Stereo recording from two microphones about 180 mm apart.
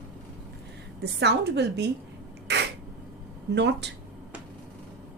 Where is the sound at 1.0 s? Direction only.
65° right (ahead or behind).